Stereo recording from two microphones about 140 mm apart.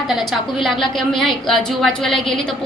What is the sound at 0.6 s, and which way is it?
A woman's voice, centre (ahead or behind).